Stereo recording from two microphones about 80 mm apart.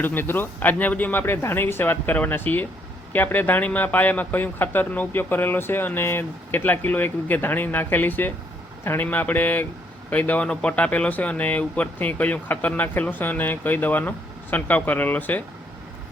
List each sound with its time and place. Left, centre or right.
0.0 s speech: left
1.2 s speech: left